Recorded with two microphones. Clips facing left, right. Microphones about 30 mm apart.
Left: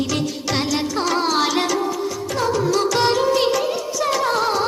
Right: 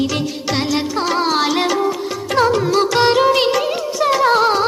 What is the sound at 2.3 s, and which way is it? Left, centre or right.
Music, right.